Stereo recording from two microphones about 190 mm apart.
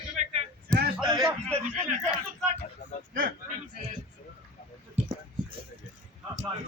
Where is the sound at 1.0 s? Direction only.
20° right (ahead or behind).